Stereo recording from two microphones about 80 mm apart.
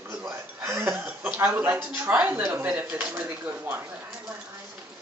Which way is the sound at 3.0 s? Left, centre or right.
Right.